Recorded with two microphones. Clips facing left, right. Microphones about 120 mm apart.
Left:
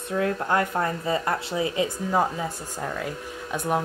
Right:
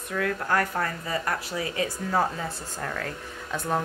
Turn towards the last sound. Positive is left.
turn(degrees=15)  # may be behind; listen again after turning